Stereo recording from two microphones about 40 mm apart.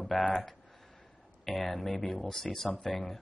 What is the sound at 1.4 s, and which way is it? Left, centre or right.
Speech, centre.